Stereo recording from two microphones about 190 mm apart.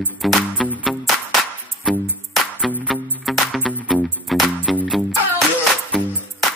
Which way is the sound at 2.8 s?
5° right (ahead or behind).